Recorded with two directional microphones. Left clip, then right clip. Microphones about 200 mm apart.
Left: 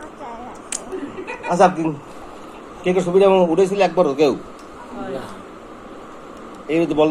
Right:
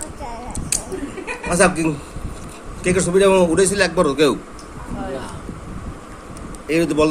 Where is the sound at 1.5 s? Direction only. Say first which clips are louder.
Left 2 dB; 45° right (ahead or behind).